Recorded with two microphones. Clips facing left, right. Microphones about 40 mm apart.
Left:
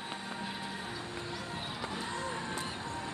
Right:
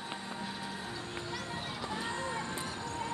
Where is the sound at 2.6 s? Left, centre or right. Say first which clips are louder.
Even; left.